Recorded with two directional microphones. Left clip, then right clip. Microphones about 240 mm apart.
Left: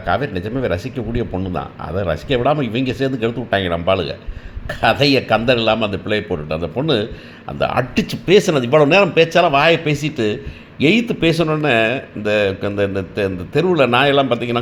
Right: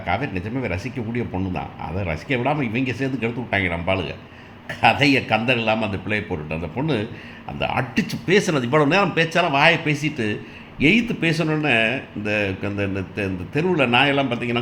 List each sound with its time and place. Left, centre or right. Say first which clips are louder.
0.1 s a man's voice: left 5 dB; left